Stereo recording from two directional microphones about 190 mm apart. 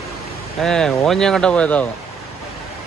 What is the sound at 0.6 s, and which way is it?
Speech, 5° left (ahead or behind).